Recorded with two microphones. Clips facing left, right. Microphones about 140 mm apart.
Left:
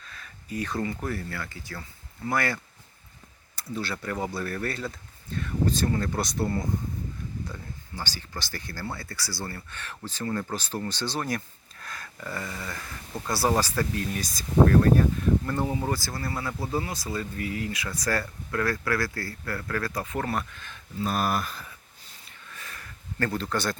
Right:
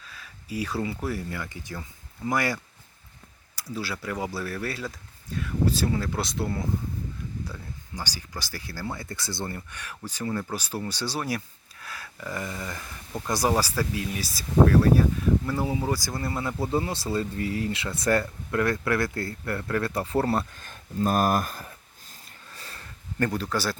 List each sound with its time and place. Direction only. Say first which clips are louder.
0.0 s speech: even; 5° right (ahead or behind)
7.9 s speech: even; 15° right (ahead or behind); by 21.7 s 45° right (ahead or behind)
22.5 s sniff: even; 30° right (ahead or behind)
23.1 s speech: right 1 dB; 15° right (ahead or behind)